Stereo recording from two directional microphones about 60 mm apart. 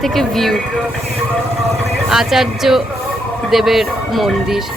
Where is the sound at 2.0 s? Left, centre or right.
Centre.